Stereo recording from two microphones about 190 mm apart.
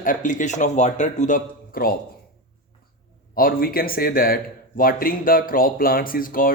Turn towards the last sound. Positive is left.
turn(degrees=45)  # may be behind; listen again after turning